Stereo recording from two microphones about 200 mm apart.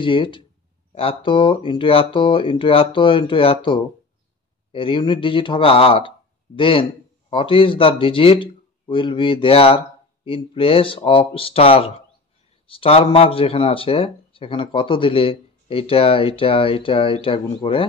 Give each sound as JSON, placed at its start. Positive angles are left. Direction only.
{"t": 0.0, "sound": "speech", "side_deg": 25}